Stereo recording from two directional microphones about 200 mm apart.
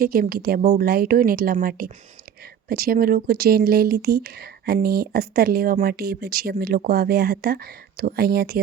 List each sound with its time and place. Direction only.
0.0 s speech: 50° right (ahead or behind)